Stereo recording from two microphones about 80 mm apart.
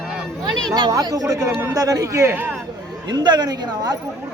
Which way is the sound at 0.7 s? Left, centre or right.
Right.